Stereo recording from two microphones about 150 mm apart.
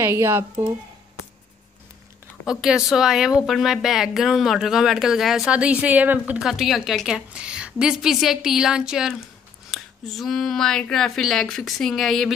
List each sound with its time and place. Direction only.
0.0 s speech: 15° right (ahead or behind)
2.4 s speech: 5° right (ahead or behind)